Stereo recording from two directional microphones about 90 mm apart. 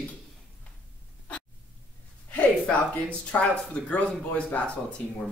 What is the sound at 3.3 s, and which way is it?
A man's voice, 15° left (ahead or behind).